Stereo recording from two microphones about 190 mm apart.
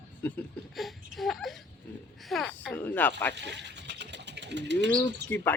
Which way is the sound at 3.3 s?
65° right (ahead or behind).